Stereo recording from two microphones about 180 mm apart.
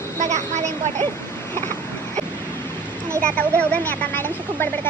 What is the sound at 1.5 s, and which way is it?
Vehicle, 15° left (ahead or behind).